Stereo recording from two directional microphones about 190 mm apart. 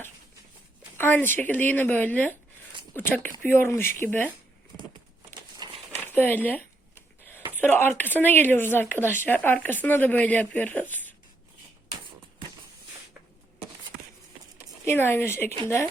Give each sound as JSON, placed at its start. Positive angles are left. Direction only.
{"t": 0.9, "sound": "speech", "side_deg": 10}
{"t": 5.5, "sound": "crumpling", "side_deg": -25}
{"t": 6.0, "sound": "a sound", "side_deg": 10}
{"t": 7.7, "sound": "speech", "side_deg": 10}
{"t": 14.8, "sound": "speech", "side_deg": 10}